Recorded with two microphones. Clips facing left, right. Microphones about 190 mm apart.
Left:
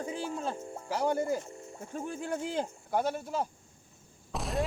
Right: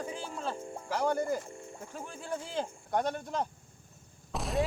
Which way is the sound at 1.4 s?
20° left (ahead or behind).